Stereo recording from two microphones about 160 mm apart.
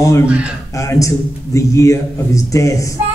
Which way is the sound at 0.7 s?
20° left (ahead or behind).